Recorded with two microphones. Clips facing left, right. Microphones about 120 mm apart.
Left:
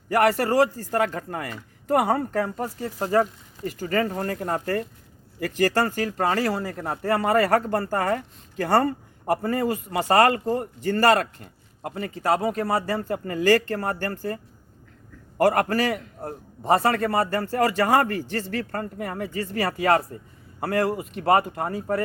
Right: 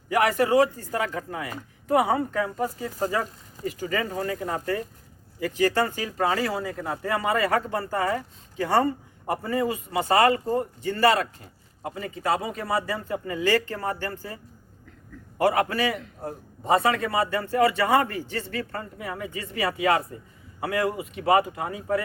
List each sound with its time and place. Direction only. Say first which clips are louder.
0.8 s a man's voice: left 4 dB; 45° left (ahead or behind)
15.4 s a man's voice: left 2 dB; 50° left (ahead or behind)